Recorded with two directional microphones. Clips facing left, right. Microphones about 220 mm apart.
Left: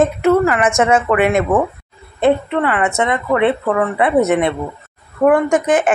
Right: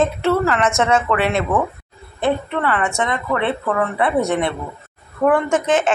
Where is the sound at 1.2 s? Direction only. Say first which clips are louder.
Left 5 dB; 50° left (ahead or behind).